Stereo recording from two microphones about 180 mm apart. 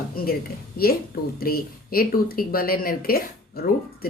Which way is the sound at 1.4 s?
55° left (ahead or behind).